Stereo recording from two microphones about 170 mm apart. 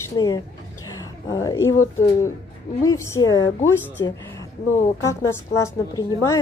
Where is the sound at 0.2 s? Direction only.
25° left (ahead or behind).